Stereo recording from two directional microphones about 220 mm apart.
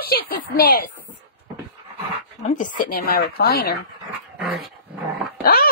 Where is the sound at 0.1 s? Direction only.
40° left (ahead or behind).